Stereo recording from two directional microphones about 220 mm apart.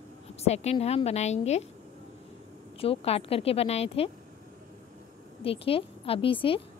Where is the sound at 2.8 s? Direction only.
25° left (ahead or behind).